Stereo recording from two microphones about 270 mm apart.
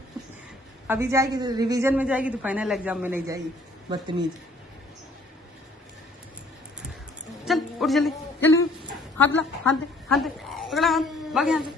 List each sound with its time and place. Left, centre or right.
0.9 s a woman's voice: centre
7.4 s a sound: centre
9.1 s a woman's voice: centre